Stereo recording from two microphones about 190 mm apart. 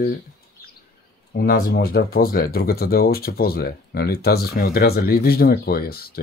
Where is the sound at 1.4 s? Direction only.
55° left (ahead or behind).